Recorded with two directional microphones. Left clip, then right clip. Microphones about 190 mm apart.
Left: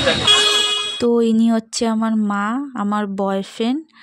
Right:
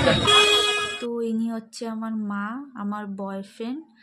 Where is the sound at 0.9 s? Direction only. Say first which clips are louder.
Left 11 dB; 45° left (ahead or behind).